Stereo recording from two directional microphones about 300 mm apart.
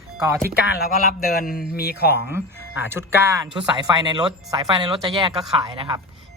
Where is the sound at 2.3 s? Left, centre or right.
Centre.